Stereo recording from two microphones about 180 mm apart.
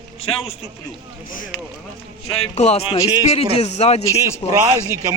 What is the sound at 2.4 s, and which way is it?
A man's voice, 35° left (ahead or behind).